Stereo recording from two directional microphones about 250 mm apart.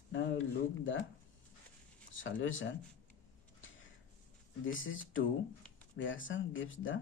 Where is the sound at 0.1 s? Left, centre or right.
Left.